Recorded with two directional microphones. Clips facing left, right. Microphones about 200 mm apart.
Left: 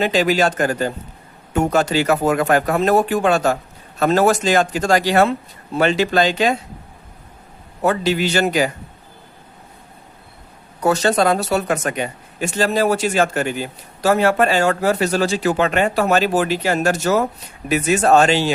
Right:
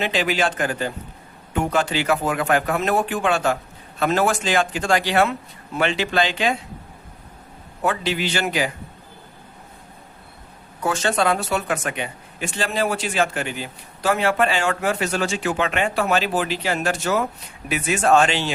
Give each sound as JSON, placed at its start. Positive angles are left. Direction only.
{"t": 0.0, "sound": "speech", "side_deg": 40}
{"t": 7.8, "sound": "speech", "side_deg": 40}
{"t": 10.8, "sound": "speech", "side_deg": 40}